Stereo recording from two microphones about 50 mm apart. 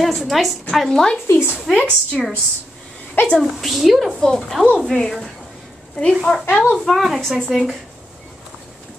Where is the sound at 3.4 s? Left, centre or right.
Centre.